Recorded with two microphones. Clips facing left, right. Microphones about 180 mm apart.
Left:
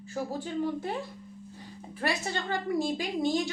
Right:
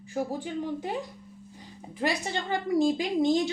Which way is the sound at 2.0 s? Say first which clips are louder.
Right 2 dB; 15° right (ahead or behind).